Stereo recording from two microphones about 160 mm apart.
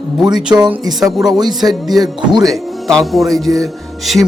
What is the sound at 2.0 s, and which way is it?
Speech, 25° right (ahead or behind).